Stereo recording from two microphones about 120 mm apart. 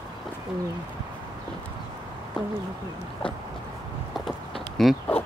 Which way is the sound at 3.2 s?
45° left (ahead or behind).